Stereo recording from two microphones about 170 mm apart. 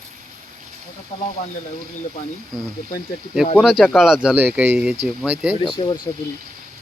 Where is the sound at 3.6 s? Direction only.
Centre (ahead or behind).